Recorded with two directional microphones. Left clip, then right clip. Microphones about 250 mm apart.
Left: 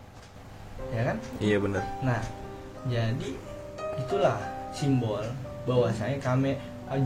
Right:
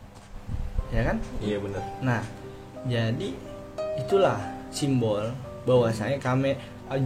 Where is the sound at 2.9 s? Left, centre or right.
Right.